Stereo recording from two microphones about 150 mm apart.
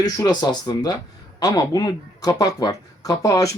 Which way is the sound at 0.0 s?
25° left (ahead or behind).